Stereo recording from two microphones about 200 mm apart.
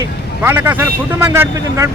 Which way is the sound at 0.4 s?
10° right (ahead or behind).